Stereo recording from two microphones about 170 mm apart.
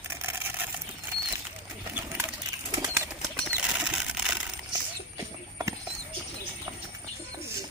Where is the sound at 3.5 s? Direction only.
5° right (ahead or behind).